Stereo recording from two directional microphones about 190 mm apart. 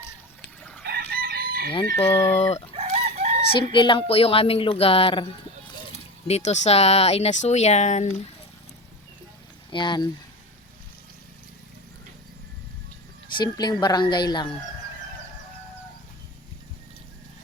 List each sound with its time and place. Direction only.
0.6 s chicken: 5° left (ahead or behind)
0.9 s chicken: 55° right (ahead or behind)
2.1 s speech: 30° left (ahead or behind)
2.7 s chicken: 35° right (ahead or behind)
3.6 s a woman's voice: 25° left (ahead or behind)
5.9 s a sound: 35° left (ahead or behind)
6.7 s speech: 35° left (ahead or behind)
9.6 s speech: 25° left (ahead or behind)
13.3 s a woman's voice: 20° left (ahead or behind)